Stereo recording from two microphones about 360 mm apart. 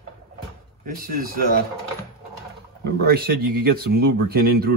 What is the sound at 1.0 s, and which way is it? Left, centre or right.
Speech, right.